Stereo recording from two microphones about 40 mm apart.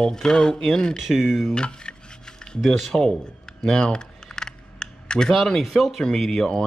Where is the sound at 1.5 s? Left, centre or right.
Left.